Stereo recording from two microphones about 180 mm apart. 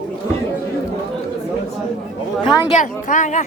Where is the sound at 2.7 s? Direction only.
45° left (ahead or behind).